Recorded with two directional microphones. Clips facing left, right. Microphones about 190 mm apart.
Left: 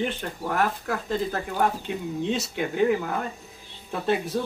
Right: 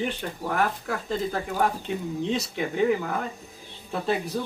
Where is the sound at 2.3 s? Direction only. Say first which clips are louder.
Even; centre (ahead or behind).